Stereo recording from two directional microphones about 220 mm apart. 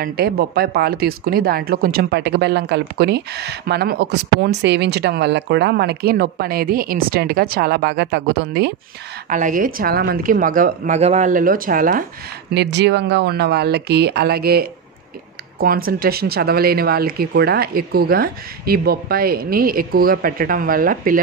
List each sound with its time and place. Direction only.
0.0 s speech: 45° right (ahead or behind)
9.3 s a woman's voice: 35° right (ahead or behind)
12.5 s speech: 50° right (ahead or behind)